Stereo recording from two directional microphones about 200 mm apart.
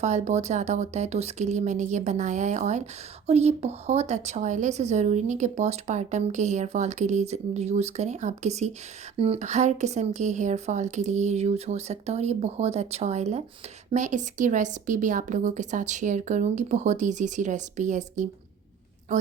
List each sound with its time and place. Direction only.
0.0 s speech: 35° right (ahead or behind)